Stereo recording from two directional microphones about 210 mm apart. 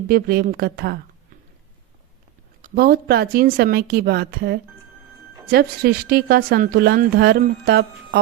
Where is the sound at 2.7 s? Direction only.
50° right (ahead or behind).